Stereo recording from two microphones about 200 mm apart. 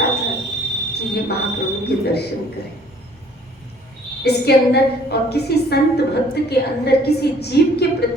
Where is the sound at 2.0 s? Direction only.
55° left (ahead or behind).